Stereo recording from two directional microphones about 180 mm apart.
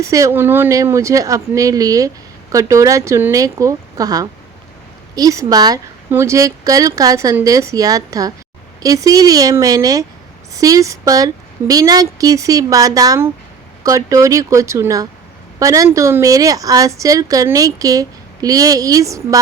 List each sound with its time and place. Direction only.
0.0 s a woman's voice: 15° right (ahead or behind)